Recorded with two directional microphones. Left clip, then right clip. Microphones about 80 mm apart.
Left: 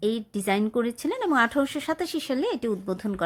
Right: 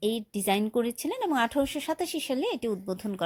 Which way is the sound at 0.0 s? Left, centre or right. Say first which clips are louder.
Left 2 dB; right.